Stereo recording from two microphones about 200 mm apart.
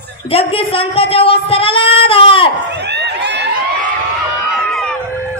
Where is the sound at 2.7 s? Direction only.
55° right (ahead or behind).